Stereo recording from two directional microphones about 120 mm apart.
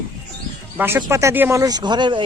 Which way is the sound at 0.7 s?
20° right (ahead or behind).